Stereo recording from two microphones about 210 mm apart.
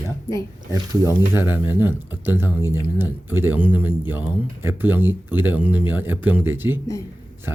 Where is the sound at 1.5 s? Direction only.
10° right (ahead or behind).